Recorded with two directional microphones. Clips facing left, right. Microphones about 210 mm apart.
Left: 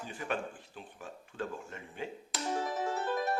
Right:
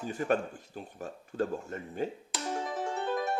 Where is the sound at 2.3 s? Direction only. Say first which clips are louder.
Even; centre (ahead or behind).